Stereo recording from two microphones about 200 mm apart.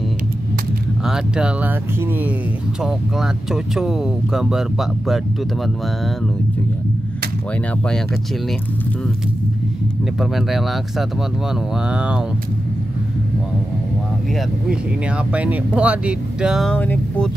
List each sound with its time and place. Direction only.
1.0 s speech: 5° right (ahead or behind)
3.7 s speech: centre (ahead or behind)
10.3 s speech: centre (ahead or behind)
15.3 s speech: 5° right (ahead or behind)